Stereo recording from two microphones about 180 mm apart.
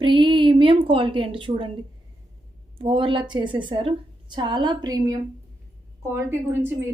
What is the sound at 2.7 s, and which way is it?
A woman's voice, 30° right (ahead or behind).